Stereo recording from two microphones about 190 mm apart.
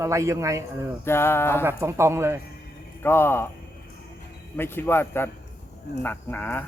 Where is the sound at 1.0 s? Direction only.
15° left (ahead or behind).